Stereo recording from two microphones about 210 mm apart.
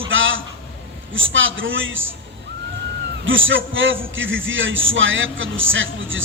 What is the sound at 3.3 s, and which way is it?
A man's voice, 65° right (ahead or behind).